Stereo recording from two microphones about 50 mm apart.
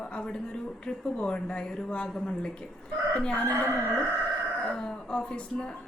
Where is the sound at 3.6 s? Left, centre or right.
Right.